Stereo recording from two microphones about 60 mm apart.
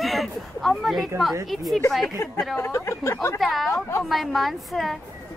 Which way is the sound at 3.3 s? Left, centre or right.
Centre.